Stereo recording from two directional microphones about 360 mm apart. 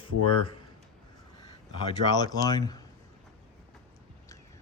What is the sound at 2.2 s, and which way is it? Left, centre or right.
Speech, centre.